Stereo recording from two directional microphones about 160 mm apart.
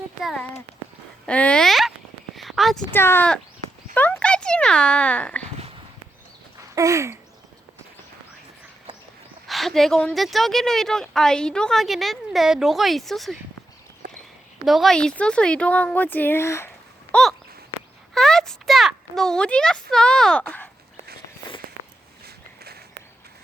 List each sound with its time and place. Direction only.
0.2 s a woman's voice: centre (ahead or behind)
2.3 s a sound: centre (ahead or behind)
2.9 s speech: 15° left (ahead or behind)
6.7 s a sound: 20° right (ahead or behind)
9.5 s a woman's voice: centre (ahead or behind)
14.6 s a child's voice: centre (ahead or behind)